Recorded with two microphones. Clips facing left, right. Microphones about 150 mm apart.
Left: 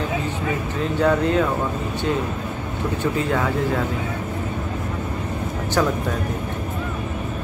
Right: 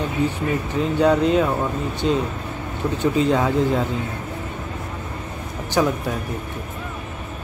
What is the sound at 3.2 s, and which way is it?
Speech, 20° right (ahead or behind).